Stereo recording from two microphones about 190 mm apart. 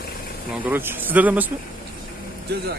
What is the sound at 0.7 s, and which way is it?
Speech, 10° right (ahead or behind).